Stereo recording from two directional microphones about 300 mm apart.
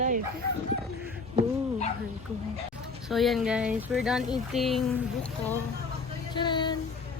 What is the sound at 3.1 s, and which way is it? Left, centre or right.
Speech, centre.